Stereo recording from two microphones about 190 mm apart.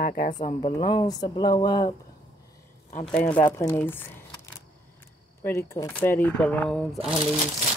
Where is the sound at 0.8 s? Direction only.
25° left (ahead or behind).